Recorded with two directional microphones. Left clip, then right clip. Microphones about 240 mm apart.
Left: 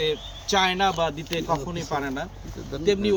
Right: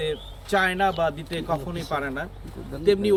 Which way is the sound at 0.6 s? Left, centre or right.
Right.